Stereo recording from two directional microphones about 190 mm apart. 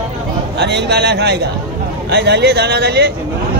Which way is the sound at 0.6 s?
65° right (ahead or behind).